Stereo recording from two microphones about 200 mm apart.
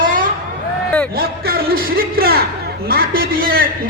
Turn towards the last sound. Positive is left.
turn(degrees=-45)  # may be behind; listen again after turning